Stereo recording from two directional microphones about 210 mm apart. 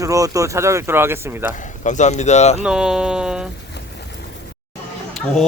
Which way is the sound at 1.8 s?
35° left (ahead or behind).